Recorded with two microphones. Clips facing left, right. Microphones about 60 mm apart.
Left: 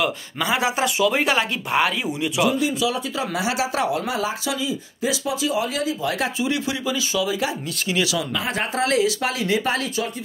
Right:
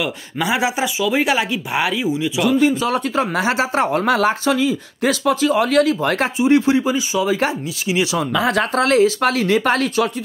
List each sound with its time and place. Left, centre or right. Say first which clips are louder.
0.4 s speech: right 3 dB; centre
0.9 s speech: right 1 dB; centre
2.4 s speech: right 5 dB; right
4.0 s speech: right 8 dB; right
6.4 s speech: right 9 dB; right
8.5 s speech: right 6 dB; right